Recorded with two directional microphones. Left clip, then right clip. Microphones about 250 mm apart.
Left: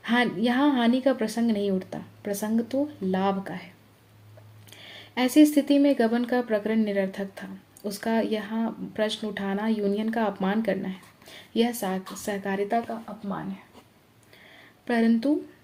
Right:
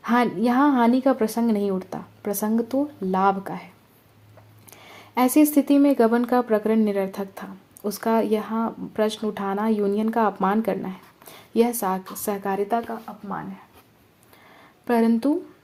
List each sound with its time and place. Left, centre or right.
0.0 s speech: right
4.7 s speech: right
14.8 s speech: right